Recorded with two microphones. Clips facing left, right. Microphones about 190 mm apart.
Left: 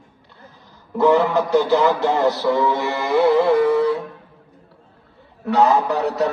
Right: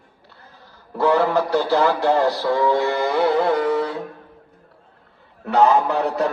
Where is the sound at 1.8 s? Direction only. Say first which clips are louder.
Even; 20° left (ahead or behind).